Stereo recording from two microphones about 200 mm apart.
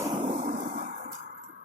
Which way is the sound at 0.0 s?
25° right (ahead or behind).